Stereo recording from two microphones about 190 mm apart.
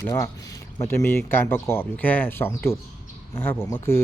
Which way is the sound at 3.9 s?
15° left (ahead or behind).